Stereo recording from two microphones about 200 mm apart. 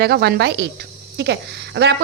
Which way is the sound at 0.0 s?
55° right (ahead or behind).